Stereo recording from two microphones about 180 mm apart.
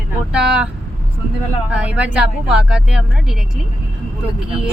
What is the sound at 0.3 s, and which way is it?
Vehicle, 5° right (ahead or behind).